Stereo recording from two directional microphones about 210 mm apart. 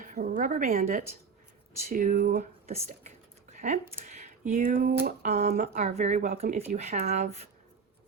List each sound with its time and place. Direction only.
0.0 s speech: 40° right (ahead or behind)
2.6 s speech: 30° right (ahead or behind)